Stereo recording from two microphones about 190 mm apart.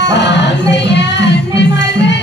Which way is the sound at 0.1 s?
65° left (ahead or behind).